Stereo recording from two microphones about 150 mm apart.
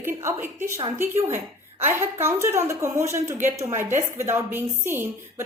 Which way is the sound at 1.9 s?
15° right (ahead or behind).